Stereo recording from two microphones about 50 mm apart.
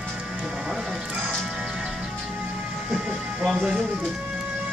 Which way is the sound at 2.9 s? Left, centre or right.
Centre.